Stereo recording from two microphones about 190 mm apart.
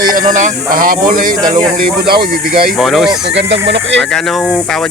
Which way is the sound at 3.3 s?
65° right (ahead or behind).